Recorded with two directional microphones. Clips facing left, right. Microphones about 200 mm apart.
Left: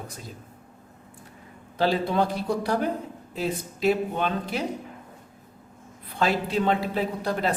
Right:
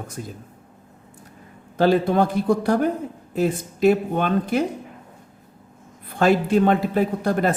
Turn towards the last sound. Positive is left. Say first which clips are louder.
# right 5 dB
turn(degrees=-50)  # may be behind; listen again after turning